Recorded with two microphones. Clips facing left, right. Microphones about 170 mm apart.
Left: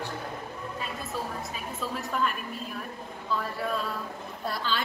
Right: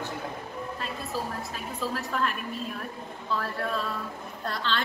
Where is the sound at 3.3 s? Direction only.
Centre (ahead or behind).